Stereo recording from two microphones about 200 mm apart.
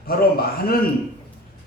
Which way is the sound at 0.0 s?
50° left (ahead or behind).